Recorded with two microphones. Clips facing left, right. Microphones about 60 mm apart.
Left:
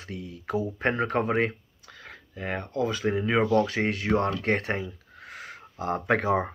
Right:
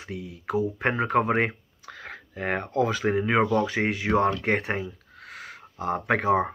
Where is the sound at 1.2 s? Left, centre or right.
Right.